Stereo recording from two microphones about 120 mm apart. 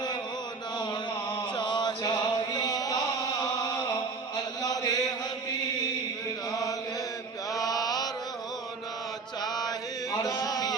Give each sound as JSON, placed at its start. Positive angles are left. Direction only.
{"t": 1.5, "sound": "chant", "side_deg": 40}
{"t": 7.5, "sound": "mantra", "side_deg": 30}
{"t": 9.4, "sound": "chant", "side_deg": 35}